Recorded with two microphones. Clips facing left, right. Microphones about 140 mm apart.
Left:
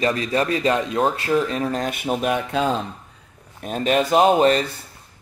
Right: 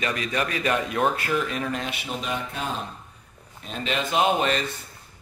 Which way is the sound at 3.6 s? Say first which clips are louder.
Left 8 dB; 45° left (ahead or behind).